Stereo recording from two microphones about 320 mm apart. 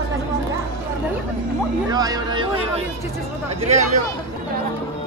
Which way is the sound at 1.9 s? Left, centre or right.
Centre.